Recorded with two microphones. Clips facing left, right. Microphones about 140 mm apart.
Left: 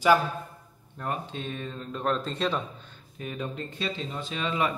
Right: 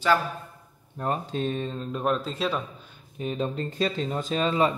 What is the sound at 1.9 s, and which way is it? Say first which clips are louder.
Speech: right 1 dB; 15° right (ahead or behind).